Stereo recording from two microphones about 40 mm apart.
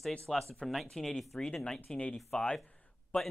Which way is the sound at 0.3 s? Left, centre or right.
Centre.